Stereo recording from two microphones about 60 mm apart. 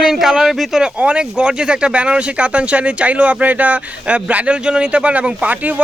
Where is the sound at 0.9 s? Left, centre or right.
Right.